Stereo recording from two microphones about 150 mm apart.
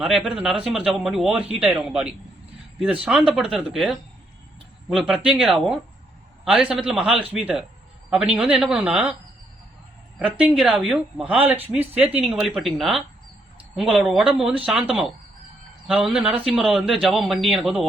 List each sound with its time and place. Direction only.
0.0 s a man's voice: 5° right (ahead or behind)
10.2 s a man's voice: 10° right (ahead or behind)